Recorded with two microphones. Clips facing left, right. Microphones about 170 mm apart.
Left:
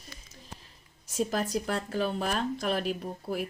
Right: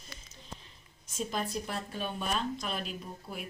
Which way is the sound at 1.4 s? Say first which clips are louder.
Left 5 dB; 75° left (ahead or behind).